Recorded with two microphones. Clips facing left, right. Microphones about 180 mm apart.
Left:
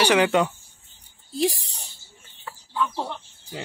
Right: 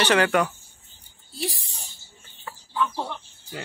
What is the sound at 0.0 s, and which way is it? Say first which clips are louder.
Cat: left 1 dB; 15° left (ahead or behind).